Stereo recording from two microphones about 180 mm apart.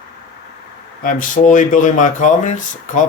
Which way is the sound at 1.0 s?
45° left (ahead or behind).